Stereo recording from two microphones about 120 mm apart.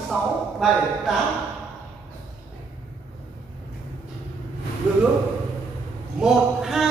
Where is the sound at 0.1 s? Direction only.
Centre (ahead or behind).